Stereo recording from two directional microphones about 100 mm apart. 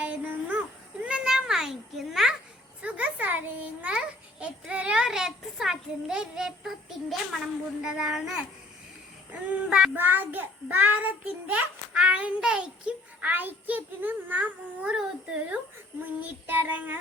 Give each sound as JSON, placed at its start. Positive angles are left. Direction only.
{"t": 0.0, "sound": "a sound", "side_deg": -15}
{"t": 2.8, "sound": "a child's voice", "side_deg": -15}
{"t": 9.9, "sound": "a child's voice", "side_deg": -20}
{"t": 16.2, "sound": "a child's voice", "side_deg": -15}